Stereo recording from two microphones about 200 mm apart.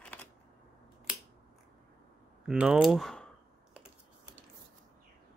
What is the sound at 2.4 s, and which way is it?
Speech, 5° right (ahead or behind).